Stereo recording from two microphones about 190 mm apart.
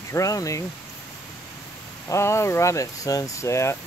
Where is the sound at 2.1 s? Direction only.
15° left (ahead or behind).